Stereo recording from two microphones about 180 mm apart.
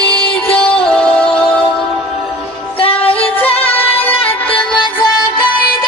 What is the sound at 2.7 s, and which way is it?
Music, 30° left (ahead or behind).